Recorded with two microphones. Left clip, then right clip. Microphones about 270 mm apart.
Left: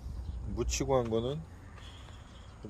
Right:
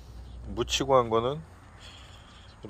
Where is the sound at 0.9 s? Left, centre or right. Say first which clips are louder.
Right 7 dB; right.